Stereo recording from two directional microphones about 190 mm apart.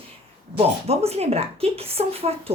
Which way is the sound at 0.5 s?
35° right (ahead or behind).